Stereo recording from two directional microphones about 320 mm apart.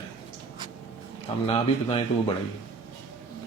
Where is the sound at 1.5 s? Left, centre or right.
Centre.